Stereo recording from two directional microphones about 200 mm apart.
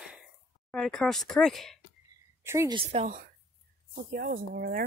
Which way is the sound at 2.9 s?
35° right (ahead or behind).